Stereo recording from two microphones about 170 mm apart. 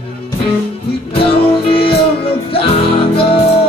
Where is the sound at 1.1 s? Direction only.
35° left (ahead or behind).